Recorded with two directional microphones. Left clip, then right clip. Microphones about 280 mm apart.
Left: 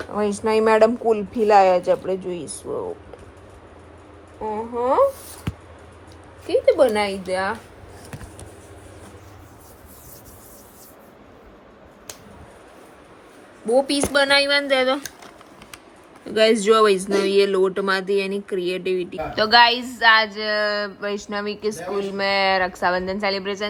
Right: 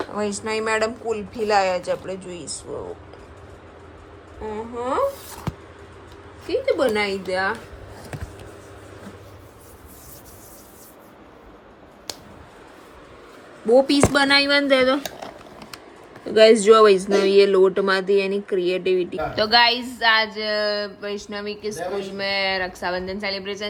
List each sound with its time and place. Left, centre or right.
0.1 s speech: centre
4.4 s speech: centre
6.5 s speech: centre
13.7 s speech: centre
16.2 s speech: centre